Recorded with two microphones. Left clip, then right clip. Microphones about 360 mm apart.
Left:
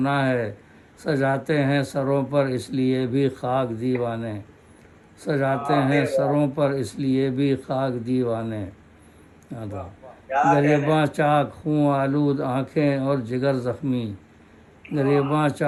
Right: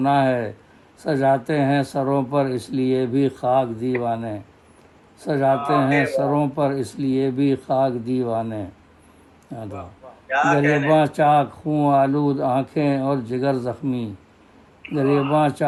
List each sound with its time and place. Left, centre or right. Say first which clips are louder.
0.0 s speech: right 4 dB; centre
10.3 s a man's voice: right 1 dB; right
10.9 s speech: right 4 dB; centre